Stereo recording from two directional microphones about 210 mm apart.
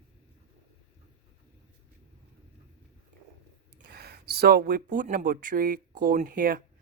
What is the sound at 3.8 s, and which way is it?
Speech, 50° right (ahead or behind).